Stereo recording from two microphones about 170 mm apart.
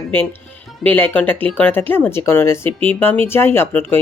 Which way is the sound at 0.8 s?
10° left (ahead or behind).